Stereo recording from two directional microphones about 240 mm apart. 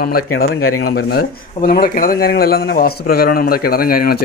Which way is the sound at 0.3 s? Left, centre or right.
Left.